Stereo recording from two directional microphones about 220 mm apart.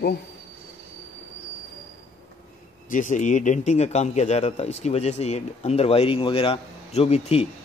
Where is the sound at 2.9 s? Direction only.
35° left (ahead or behind).